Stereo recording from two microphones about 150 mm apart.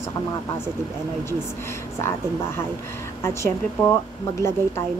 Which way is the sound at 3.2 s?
20° left (ahead or behind).